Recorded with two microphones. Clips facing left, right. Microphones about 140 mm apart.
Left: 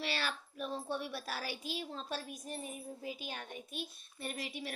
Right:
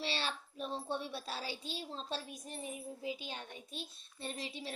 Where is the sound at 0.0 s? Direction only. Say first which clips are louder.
Even; 25° right (ahead or behind).